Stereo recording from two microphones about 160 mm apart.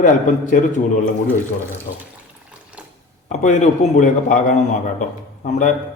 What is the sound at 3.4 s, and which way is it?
A man's voice, 45° left (ahead or behind).